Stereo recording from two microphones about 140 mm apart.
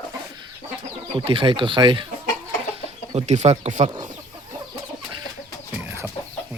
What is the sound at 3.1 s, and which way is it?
Speech, 55° right (ahead or behind).